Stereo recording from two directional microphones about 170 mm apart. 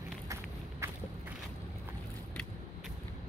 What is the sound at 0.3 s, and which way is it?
Walk, 15° right (ahead or behind).